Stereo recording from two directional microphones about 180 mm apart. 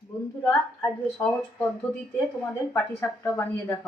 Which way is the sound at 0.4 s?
10° left (ahead or behind).